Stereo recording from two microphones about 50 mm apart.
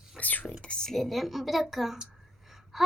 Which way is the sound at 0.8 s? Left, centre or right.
Centre.